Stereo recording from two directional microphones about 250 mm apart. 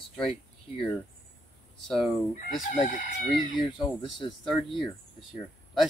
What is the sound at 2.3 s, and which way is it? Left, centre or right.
Chicken, left.